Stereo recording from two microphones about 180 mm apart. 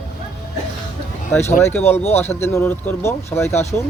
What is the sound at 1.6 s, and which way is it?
Speech, 10° left (ahead or behind).